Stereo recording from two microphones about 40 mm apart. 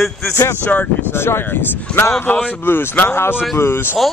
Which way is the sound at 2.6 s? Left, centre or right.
Left.